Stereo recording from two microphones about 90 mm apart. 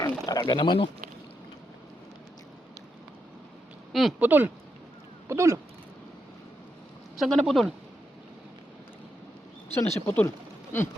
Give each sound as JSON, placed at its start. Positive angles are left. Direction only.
{"t": 0.0, "sound": "a sound", "side_deg": 45}
{"t": 4.2, "sound": "speech", "side_deg": -20}
{"t": 5.3, "sound": "speech", "side_deg": -35}
{"t": 7.2, "sound": "speech", "side_deg": 0}
{"t": 9.7, "sound": "speech", "side_deg": 20}